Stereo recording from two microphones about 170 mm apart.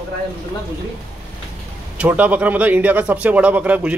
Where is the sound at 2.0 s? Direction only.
10° right (ahead or behind).